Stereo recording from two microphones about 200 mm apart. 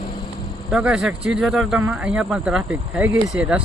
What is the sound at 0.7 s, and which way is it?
Speech, 5° right (ahead or behind).